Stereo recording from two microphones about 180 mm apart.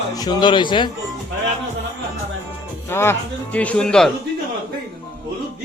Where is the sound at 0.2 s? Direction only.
25° left (ahead or behind).